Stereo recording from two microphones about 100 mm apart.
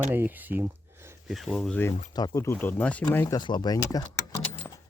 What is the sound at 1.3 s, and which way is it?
Speech, centre (ahead or behind).